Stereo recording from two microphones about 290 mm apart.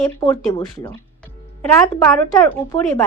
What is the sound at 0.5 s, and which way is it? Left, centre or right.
Speech, centre.